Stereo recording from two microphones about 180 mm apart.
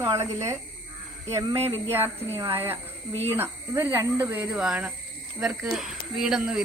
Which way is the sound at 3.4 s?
15° right (ahead or behind).